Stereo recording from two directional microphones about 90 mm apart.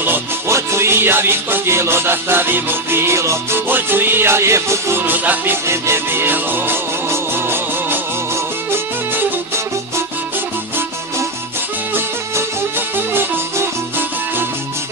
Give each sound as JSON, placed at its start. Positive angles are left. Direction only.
{"t": 0.0, "sound": "music", "side_deg": -25}
{"t": 11.9, "sound": "music", "side_deg": -25}